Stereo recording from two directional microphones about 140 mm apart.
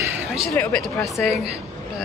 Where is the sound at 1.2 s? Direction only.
5° right (ahead or behind).